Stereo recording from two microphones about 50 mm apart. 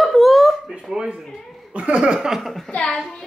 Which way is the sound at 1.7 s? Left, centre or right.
Right.